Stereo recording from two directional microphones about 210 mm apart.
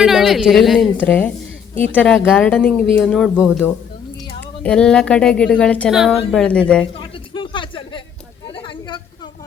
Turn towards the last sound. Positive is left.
turn(degrees=25)  # may be behind; listen again after turning